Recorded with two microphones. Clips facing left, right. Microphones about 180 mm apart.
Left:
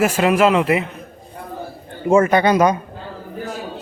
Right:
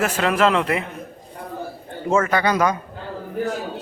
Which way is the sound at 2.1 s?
20° left (ahead or behind).